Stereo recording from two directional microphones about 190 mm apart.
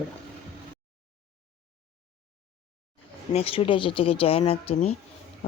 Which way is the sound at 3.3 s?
30° left (ahead or behind).